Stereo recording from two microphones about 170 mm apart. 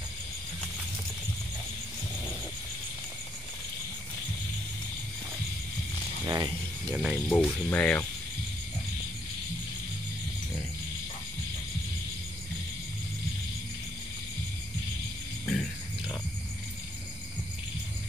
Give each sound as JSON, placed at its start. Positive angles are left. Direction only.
{"t": 6.2, "sound": "a sound", "side_deg": -20}
{"t": 6.9, "sound": "music", "side_deg": -5}
{"t": 7.2, "sound": "speech", "side_deg": 10}